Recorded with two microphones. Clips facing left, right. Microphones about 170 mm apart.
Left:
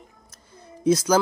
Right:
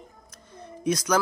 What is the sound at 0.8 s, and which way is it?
Speech, 30° left (ahead or behind).